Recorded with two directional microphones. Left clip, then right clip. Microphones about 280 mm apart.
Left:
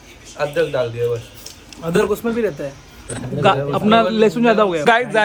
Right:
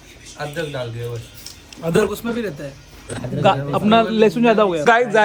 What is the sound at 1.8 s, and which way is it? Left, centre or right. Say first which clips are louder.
Speech: right 1 dB; centre.